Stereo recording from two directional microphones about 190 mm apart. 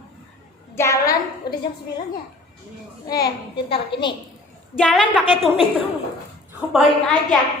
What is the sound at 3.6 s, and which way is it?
Speech, 25° left (ahead or behind).